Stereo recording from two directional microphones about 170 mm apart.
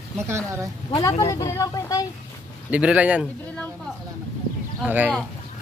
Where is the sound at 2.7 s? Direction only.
5° right (ahead or behind).